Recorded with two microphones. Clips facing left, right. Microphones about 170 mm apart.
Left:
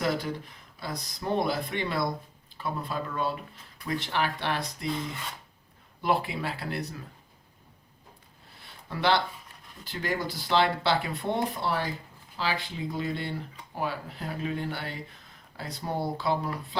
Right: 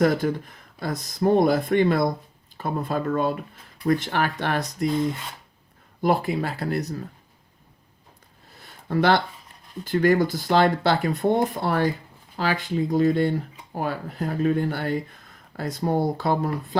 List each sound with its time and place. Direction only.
0.0 s speech: 50° right (ahead or behind)
6.0 s speech: 45° right (ahead or behind)
8.6 s a sound: 50° right (ahead or behind)
9.8 s speech: 50° right (ahead or behind)